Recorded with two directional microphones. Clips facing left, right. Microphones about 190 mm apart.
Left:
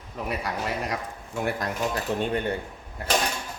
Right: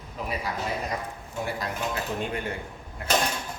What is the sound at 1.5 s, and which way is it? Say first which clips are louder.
Speech: left 4 dB; 50° left (ahead or behind).